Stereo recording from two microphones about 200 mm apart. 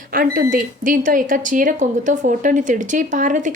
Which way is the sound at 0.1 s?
45° right (ahead or behind).